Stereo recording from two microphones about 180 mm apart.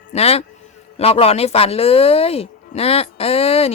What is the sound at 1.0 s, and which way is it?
Speech, 35° left (ahead or behind).